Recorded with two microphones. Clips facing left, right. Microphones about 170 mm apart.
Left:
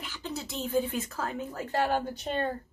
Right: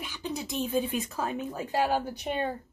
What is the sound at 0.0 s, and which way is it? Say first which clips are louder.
Speech: right 2 dB; 15° right (ahead or behind).